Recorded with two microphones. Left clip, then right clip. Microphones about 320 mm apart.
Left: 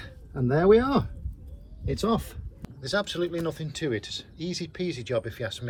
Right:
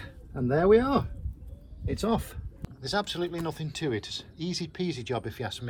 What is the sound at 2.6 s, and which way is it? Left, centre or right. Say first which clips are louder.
Speech: left 2 dB; centre.